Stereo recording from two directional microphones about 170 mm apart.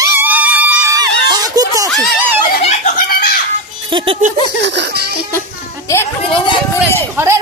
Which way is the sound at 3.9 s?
30° right (ahead or behind).